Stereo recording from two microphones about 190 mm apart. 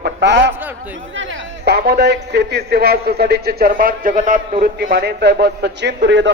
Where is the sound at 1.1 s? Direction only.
80° right; by 4.4 s 45° right (ahead or behind).